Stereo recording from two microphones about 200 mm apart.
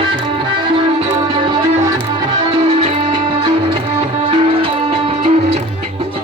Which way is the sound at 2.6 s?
30° right (ahead or behind).